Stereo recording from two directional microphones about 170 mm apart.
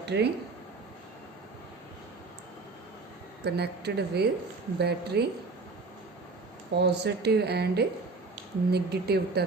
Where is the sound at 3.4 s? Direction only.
75° right (ahead or behind).